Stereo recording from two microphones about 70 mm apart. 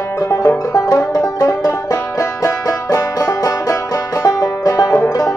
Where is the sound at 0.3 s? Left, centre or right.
Left.